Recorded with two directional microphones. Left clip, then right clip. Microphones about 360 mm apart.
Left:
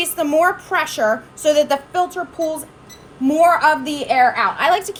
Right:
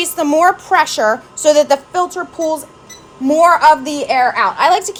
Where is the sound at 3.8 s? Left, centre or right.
Centre.